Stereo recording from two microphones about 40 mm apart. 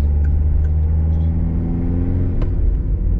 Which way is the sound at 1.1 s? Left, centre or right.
Centre.